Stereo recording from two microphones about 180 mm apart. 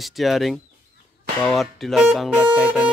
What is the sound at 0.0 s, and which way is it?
A man's voice, centre (ahead or behind).